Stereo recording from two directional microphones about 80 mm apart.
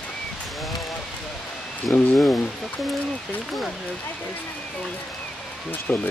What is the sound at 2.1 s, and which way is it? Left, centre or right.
Speech, centre.